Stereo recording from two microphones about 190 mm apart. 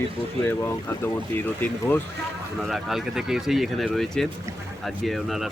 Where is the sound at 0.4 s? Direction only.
10° left (ahead or behind).